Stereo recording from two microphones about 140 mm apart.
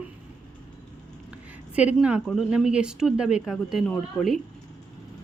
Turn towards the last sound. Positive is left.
turn(degrees=0)  # may be behind; listen again after turning